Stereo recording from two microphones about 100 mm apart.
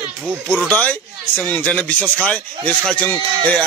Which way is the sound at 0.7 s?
15° left (ahead or behind).